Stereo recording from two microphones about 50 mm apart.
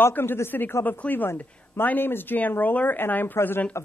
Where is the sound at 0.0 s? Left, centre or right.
Left.